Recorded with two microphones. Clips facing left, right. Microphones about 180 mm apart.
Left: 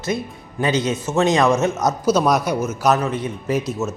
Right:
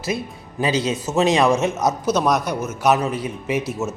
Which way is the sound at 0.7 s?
30° right (ahead or behind).